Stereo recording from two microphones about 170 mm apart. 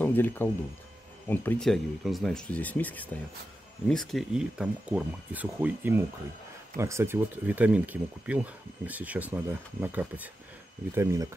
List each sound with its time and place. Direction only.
0.0 s speech: 10° left (ahead or behind); by 11.2 s 15° right (ahead or behind)